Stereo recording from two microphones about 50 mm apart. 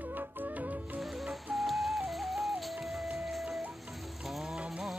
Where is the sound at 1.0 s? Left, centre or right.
Centre.